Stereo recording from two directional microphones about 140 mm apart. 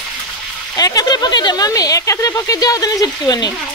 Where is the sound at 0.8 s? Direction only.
25° left (ahead or behind).